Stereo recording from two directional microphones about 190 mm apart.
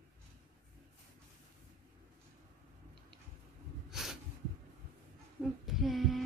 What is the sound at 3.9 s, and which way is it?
Snort, centre (ahead or behind).